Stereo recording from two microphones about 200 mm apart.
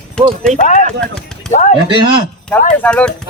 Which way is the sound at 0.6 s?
40° left (ahead or behind).